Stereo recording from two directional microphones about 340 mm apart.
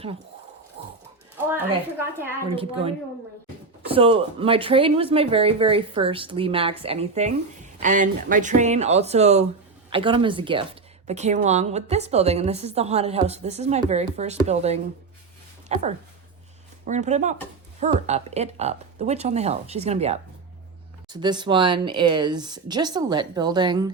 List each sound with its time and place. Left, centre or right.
1.5 s a woman's voice: centre